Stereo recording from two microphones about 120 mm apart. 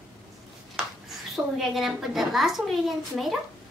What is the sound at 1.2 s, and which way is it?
A child's voice, centre (ahead or behind).